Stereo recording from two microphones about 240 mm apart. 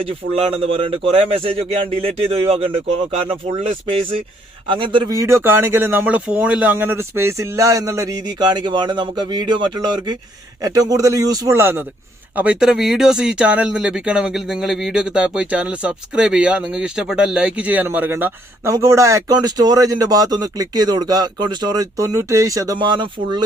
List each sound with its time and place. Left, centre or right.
0.0 s speech: right